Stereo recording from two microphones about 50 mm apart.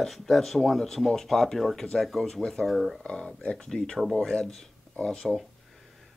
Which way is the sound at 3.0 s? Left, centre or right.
Centre.